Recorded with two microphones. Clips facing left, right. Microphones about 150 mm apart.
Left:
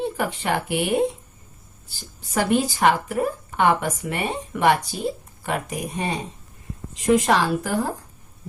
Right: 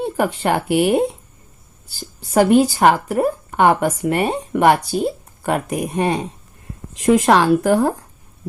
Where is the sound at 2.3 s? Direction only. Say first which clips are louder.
Right 8 dB; 45° right (ahead or behind).